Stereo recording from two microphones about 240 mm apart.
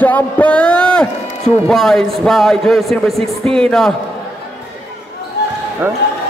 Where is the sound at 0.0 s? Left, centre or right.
Centre.